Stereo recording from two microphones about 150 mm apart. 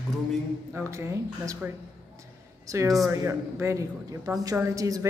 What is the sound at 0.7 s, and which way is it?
Speech, 20° right (ahead or behind).